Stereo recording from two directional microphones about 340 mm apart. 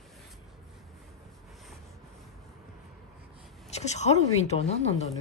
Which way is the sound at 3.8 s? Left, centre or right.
Centre.